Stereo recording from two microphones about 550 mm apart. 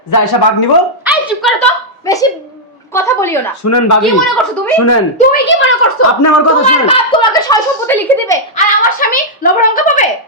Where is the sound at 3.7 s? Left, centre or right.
Left.